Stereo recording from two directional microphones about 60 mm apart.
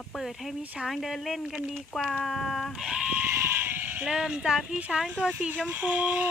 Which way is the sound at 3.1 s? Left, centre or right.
Right.